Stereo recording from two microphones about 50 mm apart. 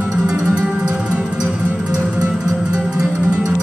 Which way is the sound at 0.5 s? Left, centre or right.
Right.